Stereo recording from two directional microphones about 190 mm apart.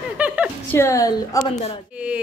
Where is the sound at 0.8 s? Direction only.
15° left (ahead or behind).